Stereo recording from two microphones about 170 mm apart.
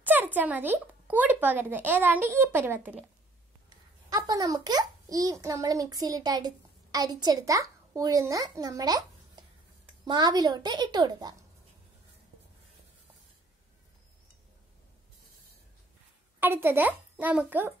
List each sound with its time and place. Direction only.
0.0 s speech: 10° right (ahead or behind)
4.1 s a child's voice: 20° right (ahead or behind)
16.3 s a child's voice: 10° right (ahead or behind)